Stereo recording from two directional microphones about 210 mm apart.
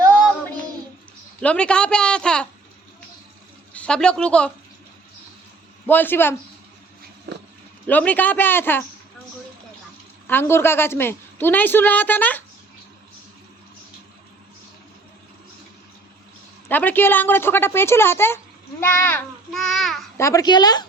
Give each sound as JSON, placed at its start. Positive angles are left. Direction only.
{"t": 1.4, "sound": "a child's voice", "side_deg": 5}
{"t": 3.8, "sound": "a child's voice", "side_deg": 5}
{"t": 5.8, "sound": "a woman's voice", "side_deg": 10}
{"t": 7.3, "sound": "a sound", "side_deg": -55}
{"t": 7.9, "sound": "a woman's voice", "side_deg": 10}
{"t": 10.2, "sound": "a woman's voice", "side_deg": 10}
{"t": 16.6, "sound": "a woman's voice", "side_deg": 10}
{"t": 20.1, "sound": "a child's voice", "side_deg": 15}